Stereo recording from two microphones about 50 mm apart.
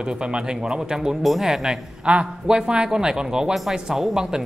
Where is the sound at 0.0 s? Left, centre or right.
Centre.